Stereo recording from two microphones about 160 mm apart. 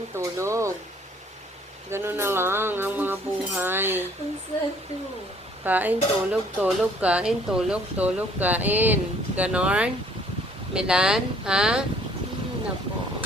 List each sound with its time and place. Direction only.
0.2 s speech: 20° right (ahead or behind)
1.9 s speech: 15° right (ahead or behind)
5.6 s speech: 10° right (ahead or behind)